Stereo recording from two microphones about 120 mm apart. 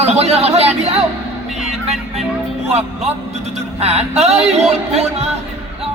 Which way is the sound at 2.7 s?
60° right (ahead or behind).